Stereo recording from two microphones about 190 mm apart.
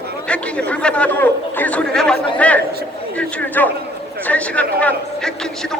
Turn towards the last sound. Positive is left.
turn(degrees=5)  # may be behind; listen again after turning